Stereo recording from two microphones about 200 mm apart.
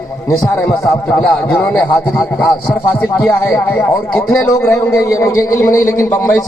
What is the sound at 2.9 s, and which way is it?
A man's voice, 10° left (ahead or behind).